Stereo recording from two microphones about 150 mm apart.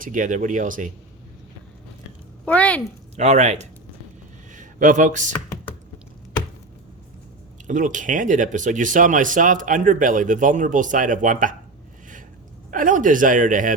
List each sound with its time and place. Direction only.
0.0 s speech: 60° right (ahead or behind)
2.4 s speech: 10° left (ahead or behind)
3.2 s speech: 50° right (ahead or behind)
7.7 s speech: 60° right (ahead or behind)
12.7 s speech: 60° right (ahead or behind)